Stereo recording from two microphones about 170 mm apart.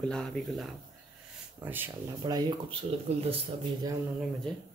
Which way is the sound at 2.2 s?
25° right (ahead or behind).